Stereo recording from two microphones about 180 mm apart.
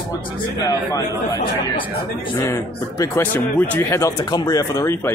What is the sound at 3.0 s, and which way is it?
Speech, 15° left (ahead or behind).